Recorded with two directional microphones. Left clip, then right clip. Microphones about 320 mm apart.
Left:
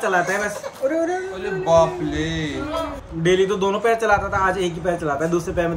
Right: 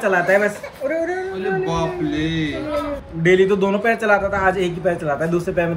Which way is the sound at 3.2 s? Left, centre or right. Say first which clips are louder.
Right 3 dB; centre.